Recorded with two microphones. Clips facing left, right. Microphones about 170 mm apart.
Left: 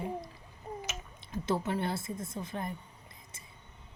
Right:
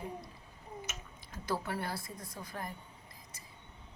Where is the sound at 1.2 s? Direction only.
25° left (ahead or behind).